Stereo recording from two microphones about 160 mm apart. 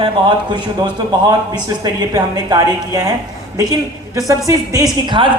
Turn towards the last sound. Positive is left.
turn(degrees=-30)  # may be behind; listen again after turning